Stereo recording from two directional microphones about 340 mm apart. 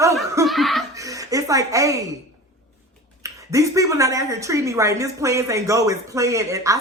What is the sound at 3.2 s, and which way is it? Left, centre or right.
Speech, centre.